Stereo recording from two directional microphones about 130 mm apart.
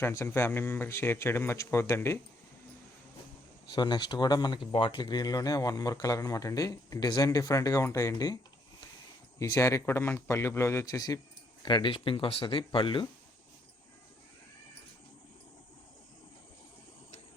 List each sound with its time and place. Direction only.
0.0 s speech: 20° left (ahead or behind)
3.7 s speech: 35° left (ahead or behind)
9.4 s speech: 25° left (ahead or behind)
11.6 s speech: 40° left (ahead or behind)